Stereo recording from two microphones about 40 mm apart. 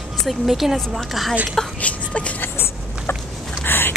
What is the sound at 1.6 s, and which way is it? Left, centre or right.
Speech, centre.